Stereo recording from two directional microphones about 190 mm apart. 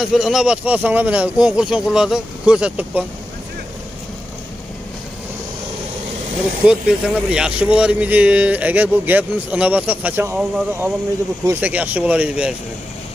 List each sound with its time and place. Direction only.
0.0 s speech: centre (ahead or behind)
6.6 s speech: 5° right (ahead or behind)